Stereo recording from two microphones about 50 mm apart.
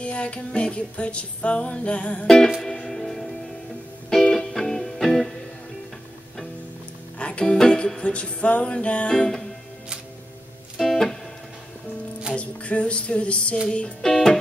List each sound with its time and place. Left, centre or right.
0.0 s music: left
2.2 s music: centre
7.2 s music: left
10.8 s music: centre
12.4 s music: left
14.0 s music: centre